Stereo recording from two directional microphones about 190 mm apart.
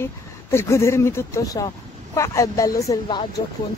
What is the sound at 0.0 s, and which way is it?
A woman's voice, 15° left (ahead or behind).